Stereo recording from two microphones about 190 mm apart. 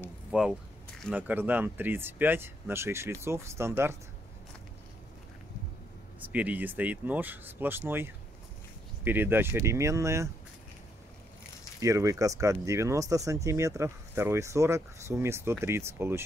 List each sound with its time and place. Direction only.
0.3 s speech: centre (ahead or behind)
6.1 s speech: 10° right (ahead or behind)
11.8 s speech: 15° right (ahead or behind)